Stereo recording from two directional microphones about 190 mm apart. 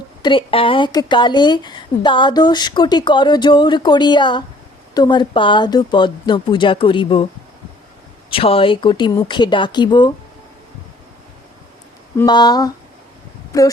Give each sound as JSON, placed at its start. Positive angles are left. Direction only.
{"t": 0.2, "sound": "speech", "side_deg": 25}
{"t": 8.3, "sound": "speech", "side_deg": 30}
{"t": 12.1, "sound": "speech", "side_deg": 20}